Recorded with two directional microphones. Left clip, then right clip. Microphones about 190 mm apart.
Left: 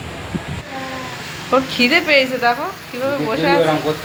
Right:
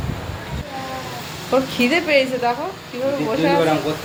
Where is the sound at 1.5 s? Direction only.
Centre (ahead or behind).